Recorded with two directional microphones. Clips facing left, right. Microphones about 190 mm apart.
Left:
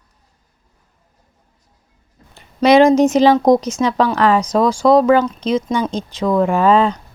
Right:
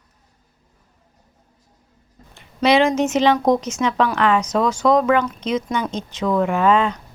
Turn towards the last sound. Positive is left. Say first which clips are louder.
# left 4 dB
turn(degrees=35)  # may be behind; listen again after turning